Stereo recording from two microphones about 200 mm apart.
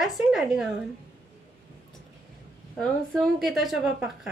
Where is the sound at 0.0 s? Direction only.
Centre (ahead or behind).